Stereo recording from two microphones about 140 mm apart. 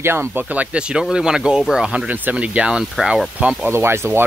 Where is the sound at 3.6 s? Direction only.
15° right (ahead or behind).